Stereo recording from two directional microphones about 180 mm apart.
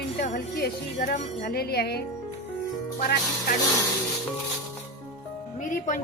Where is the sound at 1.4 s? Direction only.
60° left (ahead or behind).